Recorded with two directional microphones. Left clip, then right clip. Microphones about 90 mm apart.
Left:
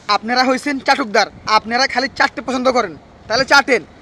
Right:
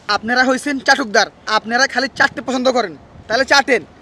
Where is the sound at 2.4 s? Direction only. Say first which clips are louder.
Even; 40° right (ahead or behind).